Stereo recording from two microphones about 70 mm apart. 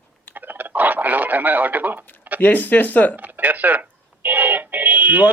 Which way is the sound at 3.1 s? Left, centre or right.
Right.